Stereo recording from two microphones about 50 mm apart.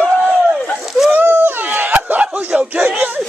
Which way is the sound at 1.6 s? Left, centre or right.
Right.